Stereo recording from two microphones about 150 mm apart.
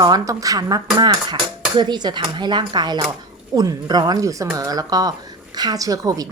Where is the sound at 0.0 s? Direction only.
25° right (ahead or behind).